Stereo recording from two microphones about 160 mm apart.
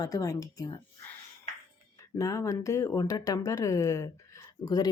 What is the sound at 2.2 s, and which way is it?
Speech, 20° left (ahead or behind).